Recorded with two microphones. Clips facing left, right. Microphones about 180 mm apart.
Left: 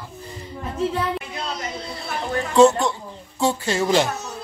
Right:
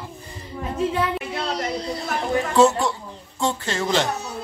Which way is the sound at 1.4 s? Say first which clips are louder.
Right 4 dB; 35° right (ahead or behind).